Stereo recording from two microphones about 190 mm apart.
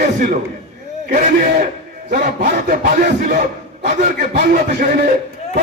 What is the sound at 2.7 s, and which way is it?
A man's voice, 45° right (ahead or behind).